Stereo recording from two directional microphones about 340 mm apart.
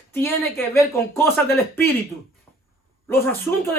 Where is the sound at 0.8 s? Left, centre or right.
Centre.